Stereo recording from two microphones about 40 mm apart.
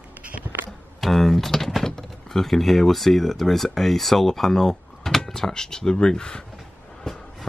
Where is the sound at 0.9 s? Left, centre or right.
Centre; by 6.4 s left.